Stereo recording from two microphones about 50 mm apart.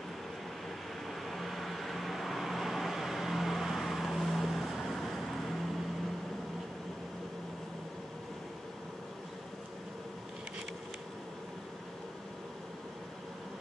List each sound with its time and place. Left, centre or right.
1.2 s vehicle: centre